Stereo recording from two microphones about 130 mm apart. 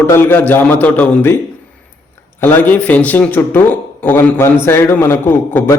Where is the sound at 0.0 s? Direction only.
15° left (ahead or behind).